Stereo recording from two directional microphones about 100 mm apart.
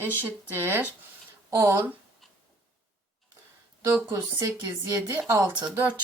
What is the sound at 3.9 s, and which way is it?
A woman's voice, 25° right (ahead or behind).